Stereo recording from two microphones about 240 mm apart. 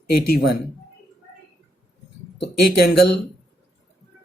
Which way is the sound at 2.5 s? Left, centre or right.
Left.